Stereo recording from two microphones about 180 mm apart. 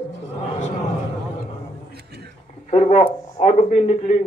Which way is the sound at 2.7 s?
35° left (ahead or behind).